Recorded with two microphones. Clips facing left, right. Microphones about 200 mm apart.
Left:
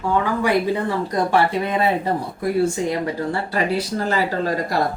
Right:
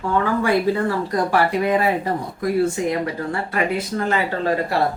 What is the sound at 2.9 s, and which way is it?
Speech, 30° left (ahead or behind).